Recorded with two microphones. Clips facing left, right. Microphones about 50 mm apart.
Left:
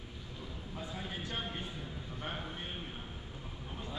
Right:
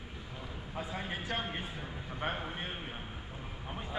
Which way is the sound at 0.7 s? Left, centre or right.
Right.